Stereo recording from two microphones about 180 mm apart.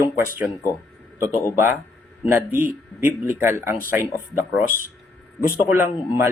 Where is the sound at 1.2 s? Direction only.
10° right (ahead or behind).